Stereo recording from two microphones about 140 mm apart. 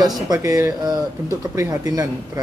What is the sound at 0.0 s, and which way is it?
Speech, 25° right (ahead or behind).